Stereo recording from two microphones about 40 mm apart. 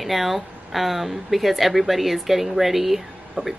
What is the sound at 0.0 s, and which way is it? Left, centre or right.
A woman's voice, centre.